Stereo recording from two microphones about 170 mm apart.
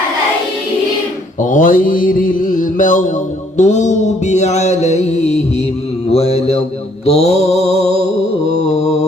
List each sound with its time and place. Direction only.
1.4 s mantra: 50° left (ahead or behind)